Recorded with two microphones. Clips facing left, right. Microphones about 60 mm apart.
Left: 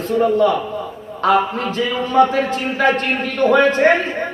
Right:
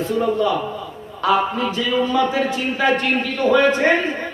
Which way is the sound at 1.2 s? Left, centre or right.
Left.